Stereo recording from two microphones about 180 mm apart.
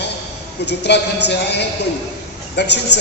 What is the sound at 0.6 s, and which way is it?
A man's voice, 70° left (ahead or behind).